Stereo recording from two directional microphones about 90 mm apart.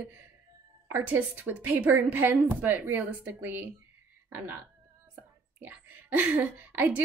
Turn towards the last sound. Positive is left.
turn(degrees=-20)  # may be behind; listen again after turning